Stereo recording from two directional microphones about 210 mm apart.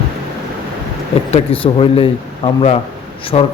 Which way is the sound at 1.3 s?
25° left (ahead or behind).